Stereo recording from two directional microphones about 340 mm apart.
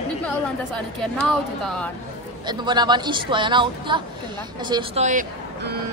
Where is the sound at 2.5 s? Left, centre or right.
Centre.